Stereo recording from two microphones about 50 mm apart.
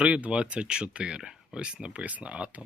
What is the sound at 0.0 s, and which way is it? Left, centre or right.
Speech, right.